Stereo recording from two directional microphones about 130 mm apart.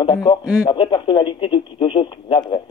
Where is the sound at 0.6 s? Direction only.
35° left (ahead or behind).